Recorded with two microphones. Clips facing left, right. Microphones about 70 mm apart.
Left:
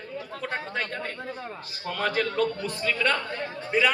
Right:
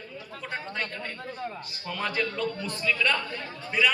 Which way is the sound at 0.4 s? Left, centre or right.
Left.